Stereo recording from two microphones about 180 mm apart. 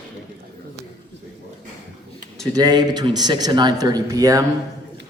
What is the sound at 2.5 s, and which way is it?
Speech, 20° right (ahead or behind).